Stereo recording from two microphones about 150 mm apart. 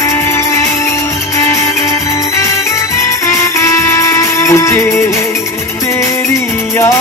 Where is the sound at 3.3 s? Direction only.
20° left (ahead or behind).